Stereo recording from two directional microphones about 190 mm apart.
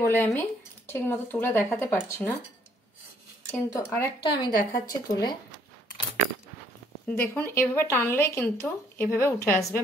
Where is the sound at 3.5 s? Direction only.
15° left (ahead or behind).